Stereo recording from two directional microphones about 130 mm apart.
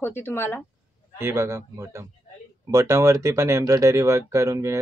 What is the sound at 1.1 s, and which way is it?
Speech, 20° right (ahead or behind).